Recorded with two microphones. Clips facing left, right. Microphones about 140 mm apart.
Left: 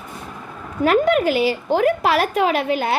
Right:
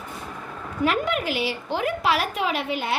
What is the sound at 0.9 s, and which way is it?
A woman's voice, 45° left (ahead or behind).